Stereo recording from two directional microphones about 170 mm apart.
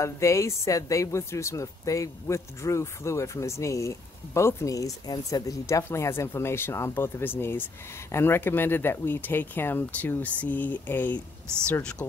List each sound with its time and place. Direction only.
0.0 s speech: 15° left (ahead or behind)